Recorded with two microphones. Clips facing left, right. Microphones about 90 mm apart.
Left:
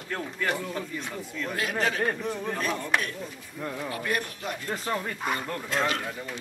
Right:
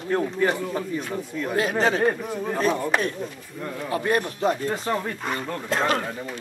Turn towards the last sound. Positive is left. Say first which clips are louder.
# right 4 dB
turn(degrees=-45)  # may be behind; listen again after turning